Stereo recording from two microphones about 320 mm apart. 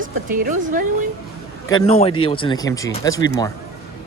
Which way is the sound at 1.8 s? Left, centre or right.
Centre.